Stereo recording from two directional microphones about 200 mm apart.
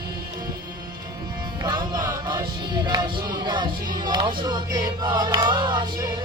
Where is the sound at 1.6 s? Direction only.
20° right (ahead or behind).